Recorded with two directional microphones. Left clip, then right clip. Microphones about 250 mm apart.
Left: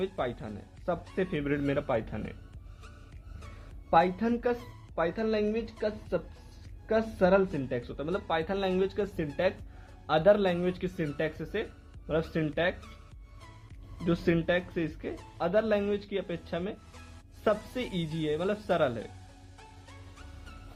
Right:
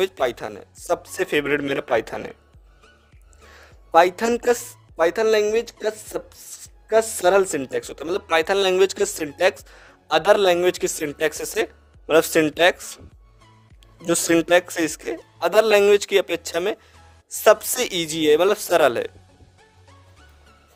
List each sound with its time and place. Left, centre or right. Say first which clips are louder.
0.0 s speech: right 11 dB; right
3.9 s speech: right 9 dB; right
14.1 s speech: right 11 dB; right